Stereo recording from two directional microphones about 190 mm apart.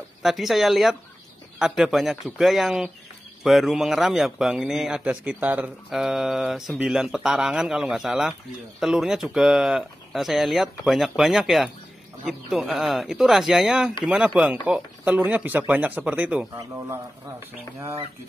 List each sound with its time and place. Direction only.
0.2 s a man's voice: centre (ahead or behind)